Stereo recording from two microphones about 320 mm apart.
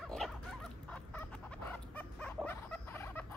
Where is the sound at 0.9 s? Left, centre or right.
Centre.